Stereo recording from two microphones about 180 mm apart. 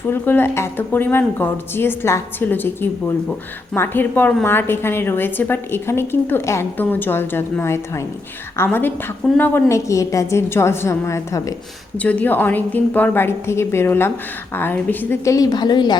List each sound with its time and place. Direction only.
0.1 s a woman's voice: 10° left (ahead or behind)